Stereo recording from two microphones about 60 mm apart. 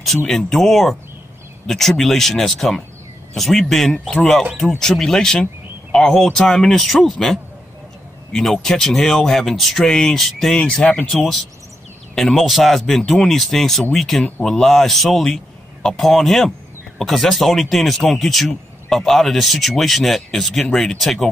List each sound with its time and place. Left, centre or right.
0.3 s speech: centre
10.6 s speech: left
12.2 s speech: centre